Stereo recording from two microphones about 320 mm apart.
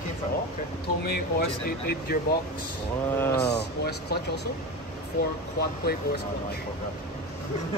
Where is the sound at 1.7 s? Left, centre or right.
Left.